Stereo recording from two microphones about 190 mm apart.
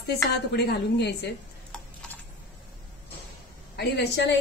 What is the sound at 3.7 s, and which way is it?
Speech, 65° left (ahead or behind).